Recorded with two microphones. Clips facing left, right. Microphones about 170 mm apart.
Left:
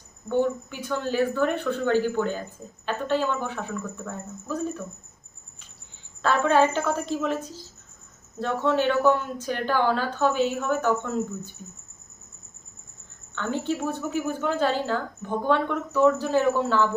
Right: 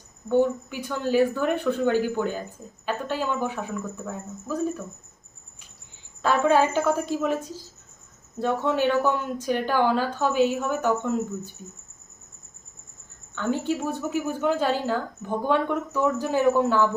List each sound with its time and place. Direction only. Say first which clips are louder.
0.3 s a woman's voice: right 2 dB; 15° right (ahead or behind)
6.2 s a woman's voice: even; 10° right (ahead or behind)
13.3 s a woman's voice: right 2 dB; 10° right (ahead or behind)